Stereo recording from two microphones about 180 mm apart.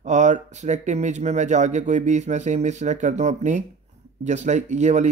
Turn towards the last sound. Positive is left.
turn(degrees=-40)  # may be behind; listen again after turning